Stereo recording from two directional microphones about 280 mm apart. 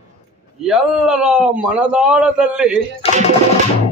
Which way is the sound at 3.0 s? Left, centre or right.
Left.